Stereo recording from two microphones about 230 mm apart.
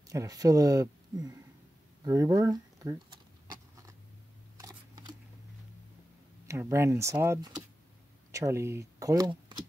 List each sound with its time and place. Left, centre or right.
0.1 s speech: centre
2.0 s a sound: centre
4.6 s camera: centre
6.4 s speech: centre